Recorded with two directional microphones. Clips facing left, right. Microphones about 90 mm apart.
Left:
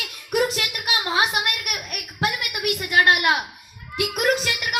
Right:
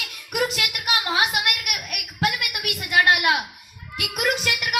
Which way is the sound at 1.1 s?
30° left (ahead or behind).